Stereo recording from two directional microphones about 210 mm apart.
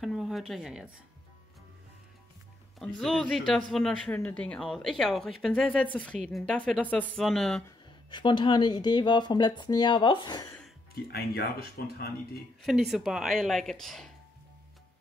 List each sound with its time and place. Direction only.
0.0 s speech: centre (ahead or behind)
2.8 s a woman's voice: 5° left (ahead or behind)
7.6 s speech: 20° left (ahead or behind)
11.1 s speech: 45° left (ahead or behind)
12.6 s a woman's voice: centre (ahead or behind)